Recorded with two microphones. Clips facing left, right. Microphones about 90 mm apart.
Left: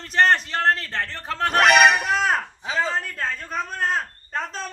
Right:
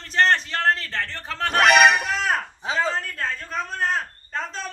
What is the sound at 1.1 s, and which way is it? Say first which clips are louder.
Music: left 3 dB; 5° left (ahead or behind).